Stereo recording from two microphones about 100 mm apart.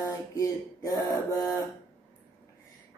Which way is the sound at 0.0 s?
40° left (ahead or behind).